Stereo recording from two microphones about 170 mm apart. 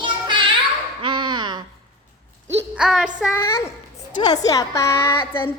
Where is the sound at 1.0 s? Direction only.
30° right (ahead or behind).